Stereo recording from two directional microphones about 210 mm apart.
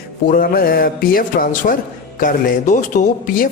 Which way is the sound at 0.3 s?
40° left (ahead or behind).